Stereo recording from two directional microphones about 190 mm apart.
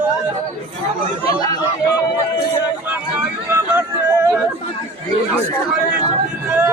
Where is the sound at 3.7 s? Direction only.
10° right (ahead or behind).